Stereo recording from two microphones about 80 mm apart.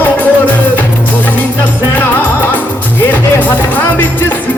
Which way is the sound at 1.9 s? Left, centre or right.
Left.